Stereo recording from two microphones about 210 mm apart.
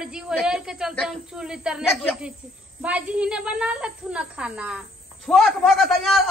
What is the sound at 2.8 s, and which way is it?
A man's voice, 5° right (ahead or behind).